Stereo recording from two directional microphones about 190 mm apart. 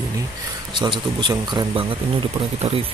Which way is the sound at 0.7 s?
25° right (ahead or behind).